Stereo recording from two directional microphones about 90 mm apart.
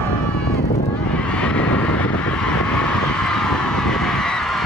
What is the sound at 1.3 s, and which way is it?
Vehicle, 10° left (ahead or behind).